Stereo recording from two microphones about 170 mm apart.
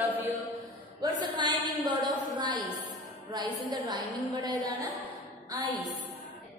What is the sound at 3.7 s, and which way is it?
Speech, 25° right (ahead or behind).